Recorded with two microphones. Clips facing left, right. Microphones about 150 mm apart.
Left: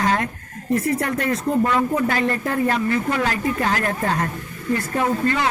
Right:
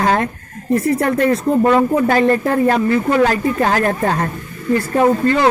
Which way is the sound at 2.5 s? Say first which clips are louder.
Right 6 dB; 50° right (ahead or behind).